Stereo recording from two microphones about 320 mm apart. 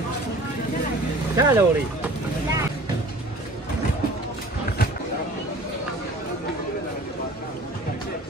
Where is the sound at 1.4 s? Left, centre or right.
Centre.